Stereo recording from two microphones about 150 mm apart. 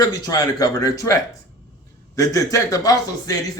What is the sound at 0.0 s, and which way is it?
Speech, 25° left (ahead or behind).